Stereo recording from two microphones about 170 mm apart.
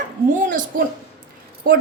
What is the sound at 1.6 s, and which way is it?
Speech, 60° right (ahead or behind).